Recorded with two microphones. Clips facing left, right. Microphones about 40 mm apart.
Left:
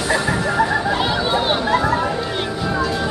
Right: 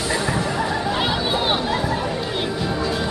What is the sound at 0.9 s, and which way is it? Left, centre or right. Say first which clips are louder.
Chatter: left 3 dB; centre.